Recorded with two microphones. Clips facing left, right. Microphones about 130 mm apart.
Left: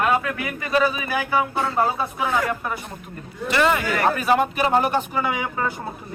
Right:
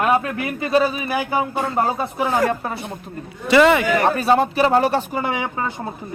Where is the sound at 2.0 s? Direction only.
35° right (ahead or behind).